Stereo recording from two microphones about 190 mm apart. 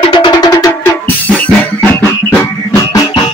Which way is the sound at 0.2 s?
20° left (ahead or behind).